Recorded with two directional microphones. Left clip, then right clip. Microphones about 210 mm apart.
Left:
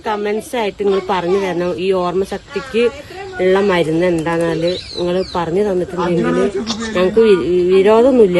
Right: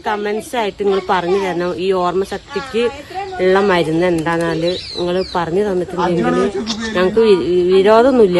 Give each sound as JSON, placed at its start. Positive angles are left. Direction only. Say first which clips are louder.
{"t": 0.0, "sound": "speech", "louder": "even", "side_deg": 0}
{"t": 3.3, "sound": "speech", "louder": "even", "side_deg": 0}